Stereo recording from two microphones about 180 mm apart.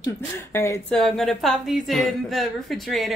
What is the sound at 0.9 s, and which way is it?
A woman's voice, 5° left (ahead or behind).